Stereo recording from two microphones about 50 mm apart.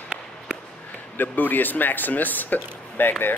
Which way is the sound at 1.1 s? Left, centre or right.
Left.